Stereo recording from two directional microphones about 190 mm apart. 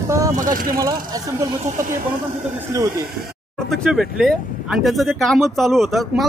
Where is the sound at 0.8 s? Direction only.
20° right (ahead or behind).